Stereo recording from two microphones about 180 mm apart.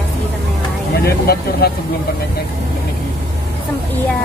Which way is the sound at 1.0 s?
60° left (ahead or behind).